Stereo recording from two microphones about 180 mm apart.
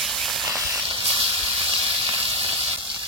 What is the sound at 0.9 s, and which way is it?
Snake, 30° right (ahead or behind).